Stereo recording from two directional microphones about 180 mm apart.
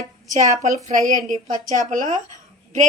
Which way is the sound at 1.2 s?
45° right (ahead or behind).